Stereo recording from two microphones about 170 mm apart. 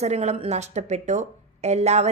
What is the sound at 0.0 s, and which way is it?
A woman's voice, 40° right (ahead or behind).